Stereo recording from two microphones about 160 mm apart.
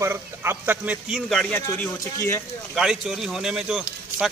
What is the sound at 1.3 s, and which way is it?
Speech, 5° left (ahead or behind).